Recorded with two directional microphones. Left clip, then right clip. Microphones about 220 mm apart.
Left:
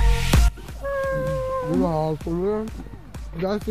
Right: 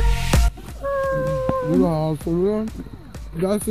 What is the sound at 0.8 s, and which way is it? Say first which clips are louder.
Cat: right 3 dB; 5° left (ahead or behind).